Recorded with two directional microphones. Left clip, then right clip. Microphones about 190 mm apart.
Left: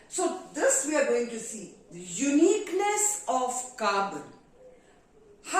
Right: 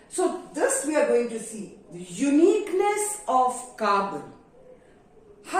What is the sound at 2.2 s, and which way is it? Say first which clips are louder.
A woman's voice: right 3 dB; 10° left (ahead or behind).